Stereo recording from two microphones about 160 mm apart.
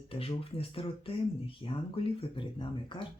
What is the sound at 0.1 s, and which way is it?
Speech, 35° left (ahead or behind).